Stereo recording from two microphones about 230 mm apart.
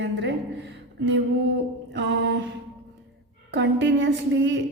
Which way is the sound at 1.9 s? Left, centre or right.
Right.